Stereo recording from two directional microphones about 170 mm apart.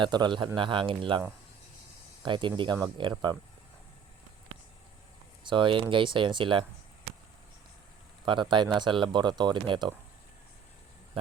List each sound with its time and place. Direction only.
0.0 s speech: 25° right (ahead or behind)
2.2 s speech: 30° right (ahead or behind)
5.5 s speech: 30° right (ahead or behind)
8.2 s speech: 30° right (ahead or behind)